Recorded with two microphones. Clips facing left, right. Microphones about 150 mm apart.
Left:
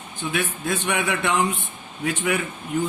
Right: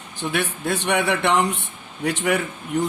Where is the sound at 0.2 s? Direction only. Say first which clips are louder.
Right 2 dB; 70° right (ahead or behind).